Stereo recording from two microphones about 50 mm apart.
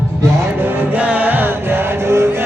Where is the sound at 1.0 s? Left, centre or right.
Right.